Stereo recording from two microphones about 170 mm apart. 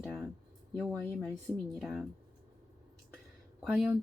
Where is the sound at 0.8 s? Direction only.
5° left (ahead or behind).